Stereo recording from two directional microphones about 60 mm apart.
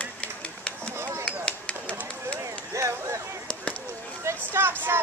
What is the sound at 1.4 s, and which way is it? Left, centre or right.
Chop, left.